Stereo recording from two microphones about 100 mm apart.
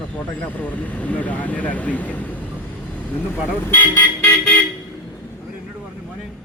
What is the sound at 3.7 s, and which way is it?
Speech, 20° left (ahead or behind).